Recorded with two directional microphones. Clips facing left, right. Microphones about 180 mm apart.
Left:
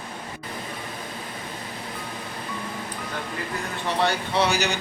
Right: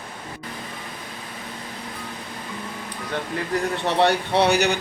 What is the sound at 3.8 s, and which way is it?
Speech, 65° right (ahead or behind).